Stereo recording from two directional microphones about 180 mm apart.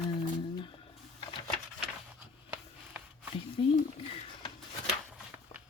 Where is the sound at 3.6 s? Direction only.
30° left (ahead or behind).